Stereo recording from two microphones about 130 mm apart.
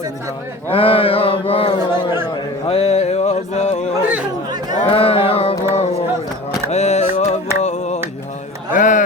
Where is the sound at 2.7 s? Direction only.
50° left (ahead or behind).